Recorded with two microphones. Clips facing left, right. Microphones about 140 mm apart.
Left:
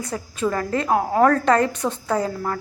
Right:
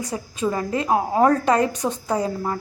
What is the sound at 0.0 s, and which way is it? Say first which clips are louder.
A woman's voice: even; 15° right (ahead or behind).